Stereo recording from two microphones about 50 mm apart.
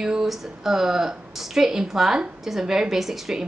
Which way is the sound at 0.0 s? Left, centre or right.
Centre.